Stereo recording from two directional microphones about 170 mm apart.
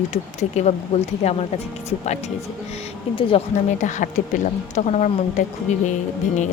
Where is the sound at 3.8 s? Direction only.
45° left (ahead or behind).